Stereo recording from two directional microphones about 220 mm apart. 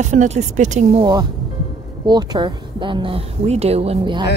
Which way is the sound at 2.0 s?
20° right (ahead or behind).